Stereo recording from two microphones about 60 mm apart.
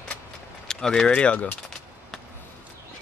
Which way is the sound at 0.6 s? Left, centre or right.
Centre.